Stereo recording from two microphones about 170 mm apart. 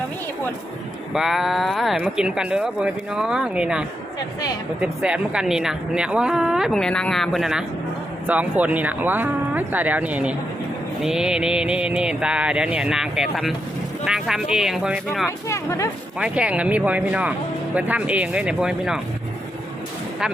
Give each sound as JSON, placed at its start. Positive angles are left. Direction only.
{"t": 1.1, "sound": "a woman's voice", "side_deg": 0}
{"t": 15.4, "sound": "speech", "side_deg": 20}
{"t": 16.1, "sound": "speech", "side_deg": -5}